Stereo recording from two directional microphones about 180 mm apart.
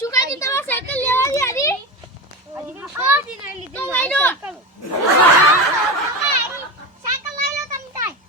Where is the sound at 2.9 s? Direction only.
10° right (ahead or behind).